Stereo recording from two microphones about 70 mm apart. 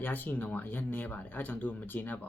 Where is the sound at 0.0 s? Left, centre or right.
Left.